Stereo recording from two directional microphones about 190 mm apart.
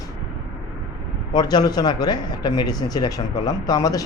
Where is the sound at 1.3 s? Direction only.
20° left (ahead or behind).